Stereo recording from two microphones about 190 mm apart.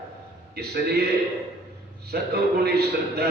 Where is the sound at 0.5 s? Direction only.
55° right (ahead or behind).